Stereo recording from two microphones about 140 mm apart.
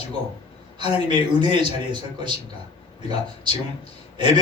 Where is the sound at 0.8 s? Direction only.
45° left (ahead or behind).